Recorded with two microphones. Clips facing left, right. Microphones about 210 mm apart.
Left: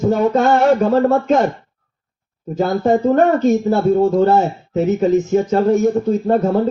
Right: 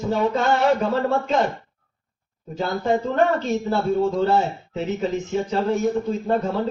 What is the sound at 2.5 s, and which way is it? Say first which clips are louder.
Speech: left 7 dB; 45° left (ahead or behind).